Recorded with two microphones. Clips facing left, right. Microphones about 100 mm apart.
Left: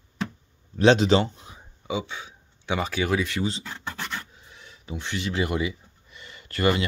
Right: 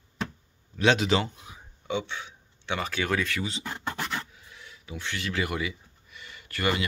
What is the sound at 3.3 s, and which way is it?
Speech, 35° left (ahead or behind).